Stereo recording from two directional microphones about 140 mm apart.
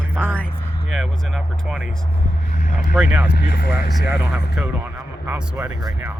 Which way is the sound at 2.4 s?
65° left (ahead or behind).